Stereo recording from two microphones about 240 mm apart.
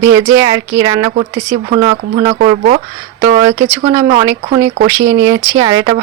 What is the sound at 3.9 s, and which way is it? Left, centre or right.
Speech, centre.